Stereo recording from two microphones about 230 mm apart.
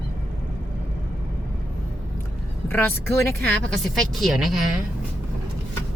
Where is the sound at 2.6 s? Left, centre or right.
Centre.